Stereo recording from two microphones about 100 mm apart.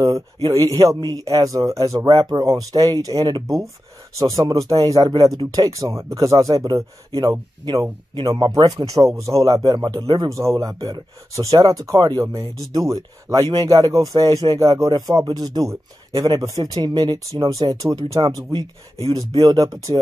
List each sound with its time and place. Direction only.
0.0 s speech: 40° right (ahead or behind)
10.0 s speech: 50° right (ahead or behind)
10.3 s speech: 30° right (ahead or behind); by 17.2 s 45° right (ahead or behind)
17.5 s speech: 35° right (ahead or behind)
19.4 s speech: 40° right (ahead or behind)